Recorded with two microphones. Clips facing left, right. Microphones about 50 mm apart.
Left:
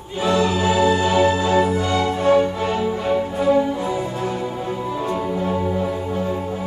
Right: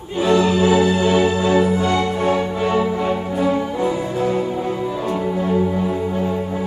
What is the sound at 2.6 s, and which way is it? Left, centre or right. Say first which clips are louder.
Music: right 3 dB; right.